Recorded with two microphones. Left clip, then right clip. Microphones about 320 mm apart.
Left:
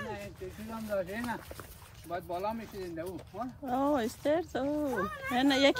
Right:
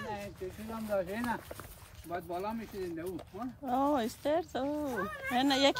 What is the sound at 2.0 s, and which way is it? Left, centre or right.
Speech, centre.